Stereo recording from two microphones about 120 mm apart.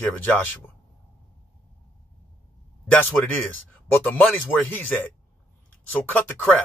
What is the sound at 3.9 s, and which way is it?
Speech, 15° left (ahead or behind).